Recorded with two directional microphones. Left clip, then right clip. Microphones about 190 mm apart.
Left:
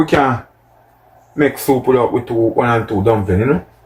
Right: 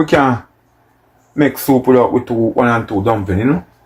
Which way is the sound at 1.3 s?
45° right (ahead or behind).